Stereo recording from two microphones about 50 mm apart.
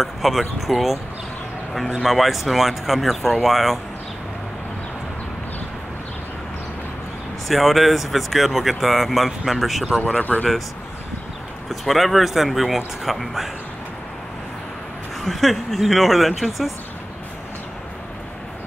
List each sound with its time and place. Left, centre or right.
0.0 s speech: centre
2.0 s speech: centre
7.4 s speech: centre
10.0 s speech: left
11.7 s speech: centre
15.2 s speech: centre